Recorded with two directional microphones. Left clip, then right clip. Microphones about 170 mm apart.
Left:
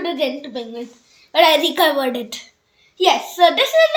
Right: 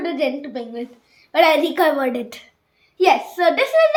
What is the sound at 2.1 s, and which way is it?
Speech, 5° left (ahead or behind).